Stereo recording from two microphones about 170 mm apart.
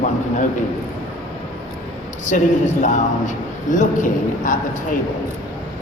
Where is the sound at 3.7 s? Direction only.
50° left (ahead or behind).